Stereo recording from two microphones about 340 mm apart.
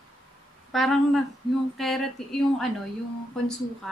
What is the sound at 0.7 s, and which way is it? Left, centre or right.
Speech, centre.